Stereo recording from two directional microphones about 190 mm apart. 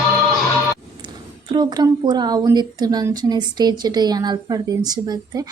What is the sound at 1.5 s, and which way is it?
Speech, 20° right (ahead or behind).